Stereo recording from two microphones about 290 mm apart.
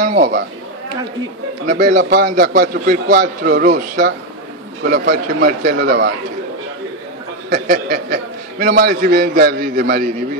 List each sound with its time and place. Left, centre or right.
0.0 s a man's voice: right
1.7 s a man's voice: right
4.8 s a man's voice: right
7.4 s a man's voice: right